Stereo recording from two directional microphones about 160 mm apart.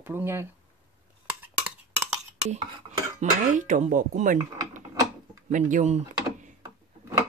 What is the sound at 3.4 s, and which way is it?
Speech, 50° right (ahead or behind).